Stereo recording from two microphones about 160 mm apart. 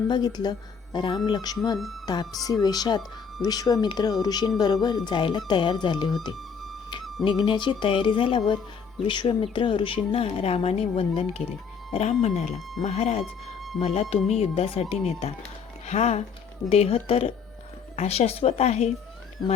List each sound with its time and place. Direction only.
0.1 s speech: 25° left (ahead or behind)
6.3 s music: centre (ahead or behind)
7.3 s speech: 30° left (ahead or behind)